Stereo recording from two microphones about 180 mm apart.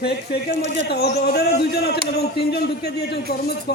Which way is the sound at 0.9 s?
65° left (ahead or behind).